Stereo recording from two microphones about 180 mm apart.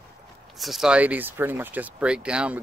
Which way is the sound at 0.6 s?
Centre (ahead or behind).